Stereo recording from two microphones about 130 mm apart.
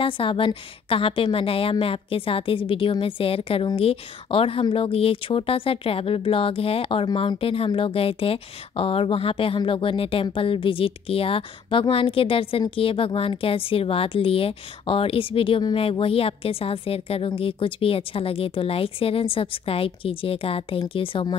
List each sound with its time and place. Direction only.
0.0 s speech: 40° left (ahead or behind)